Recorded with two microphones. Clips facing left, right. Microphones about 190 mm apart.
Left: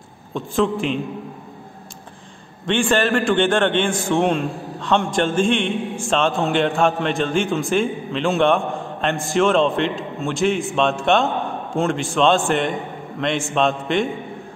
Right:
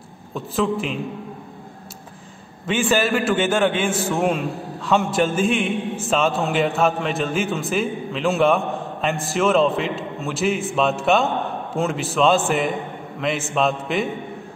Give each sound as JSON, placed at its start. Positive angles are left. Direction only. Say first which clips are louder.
{"t": 0.3, "sound": "a man's voice", "louder": "left 2 dB", "side_deg": 0}
{"t": 2.6, "sound": "a man's voice", "louder": "left 1 dB", "side_deg": -5}